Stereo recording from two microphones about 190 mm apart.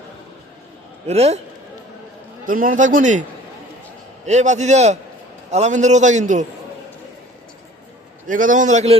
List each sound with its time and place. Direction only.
1.0 s a man's voice: 35° right (ahead or behind)
2.5 s a man's voice: 45° right (ahead or behind)
4.3 s a man's voice: 40° right (ahead or behind)
8.3 s a man's voice: 45° right (ahead or behind)